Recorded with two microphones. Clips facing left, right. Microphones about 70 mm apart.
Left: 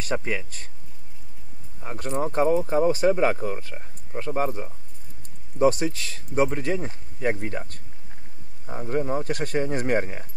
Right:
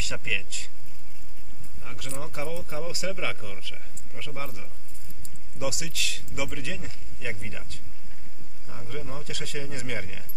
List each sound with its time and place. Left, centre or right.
0.0 s speech: left
1.8 s speech: left